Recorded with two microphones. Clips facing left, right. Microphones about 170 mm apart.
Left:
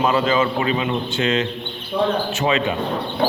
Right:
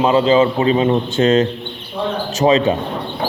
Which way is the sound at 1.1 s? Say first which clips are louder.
Right 7 dB; 45° right (ahead or behind).